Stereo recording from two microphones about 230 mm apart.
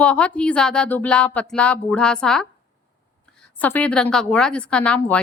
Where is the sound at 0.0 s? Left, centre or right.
Centre.